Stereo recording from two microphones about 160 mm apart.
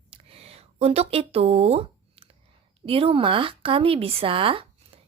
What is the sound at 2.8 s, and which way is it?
A woman's voice, 35° right (ahead or behind).